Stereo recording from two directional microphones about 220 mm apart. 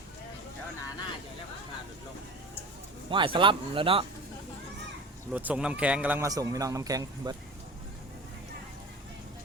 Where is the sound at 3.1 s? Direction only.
20° right (ahead or behind).